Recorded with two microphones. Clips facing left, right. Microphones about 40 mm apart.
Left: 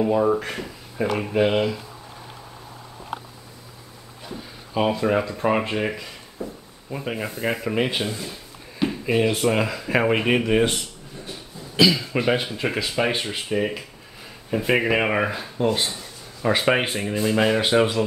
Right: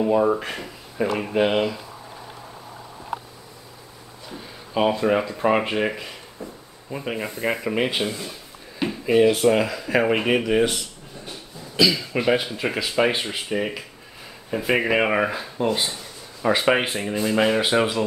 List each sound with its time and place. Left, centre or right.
0.0 s speech: centre
4.3 s speech: centre
11.8 s speech: centre